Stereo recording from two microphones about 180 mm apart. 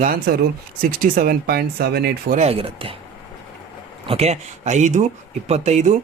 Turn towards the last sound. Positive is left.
turn(degrees=-40)  # may be behind; listen again after turning